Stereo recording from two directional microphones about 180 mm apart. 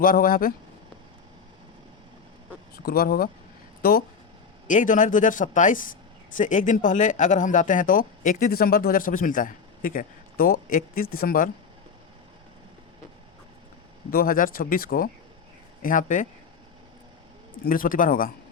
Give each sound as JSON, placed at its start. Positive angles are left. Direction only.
{"t": 0.0, "sound": "speech", "side_deg": 50}
{"t": 2.7, "sound": "speech", "side_deg": 55}
{"t": 14.1, "sound": "speech", "side_deg": 50}
{"t": 17.7, "sound": "speech", "side_deg": 50}